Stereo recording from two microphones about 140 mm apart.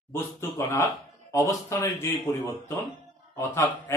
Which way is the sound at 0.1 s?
20° left (ahead or behind).